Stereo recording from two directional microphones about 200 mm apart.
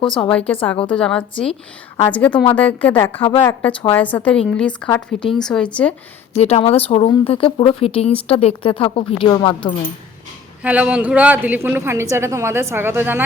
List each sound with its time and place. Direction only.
0.0 s speech: 25° left (ahead or behind)
0.3 s a woman's voice: 5° left (ahead or behind)
6.3 s speech: 30° left (ahead or behind)
10.6 s a woman's voice: 5° right (ahead or behind)